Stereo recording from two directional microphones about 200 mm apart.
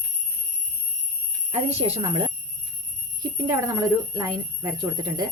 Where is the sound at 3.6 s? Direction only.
15° right (ahead or behind).